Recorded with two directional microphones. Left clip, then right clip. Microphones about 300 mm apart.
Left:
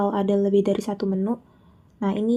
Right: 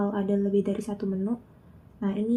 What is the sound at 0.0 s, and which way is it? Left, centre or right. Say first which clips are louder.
Speech: left 6 dB; left.